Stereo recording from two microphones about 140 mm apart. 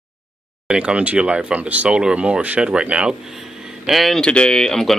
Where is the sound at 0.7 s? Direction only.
5° right (ahead or behind).